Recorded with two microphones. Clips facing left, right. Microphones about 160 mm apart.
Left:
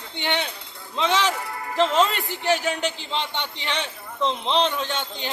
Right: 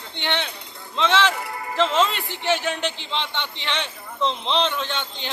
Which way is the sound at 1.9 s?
Centre (ahead or behind).